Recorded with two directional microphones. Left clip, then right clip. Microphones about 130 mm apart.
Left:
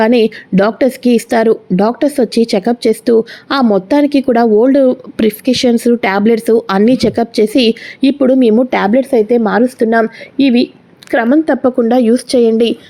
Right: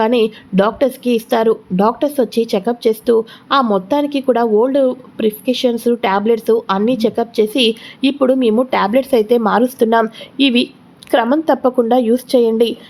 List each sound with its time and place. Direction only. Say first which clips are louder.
0.0 s speech: left 4 dB; 35° left (ahead or behind)
5.1 s a woman's voice: left 4 dB; 45° left (ahead or behind); by 12.7 s 20° left (ahead or behind)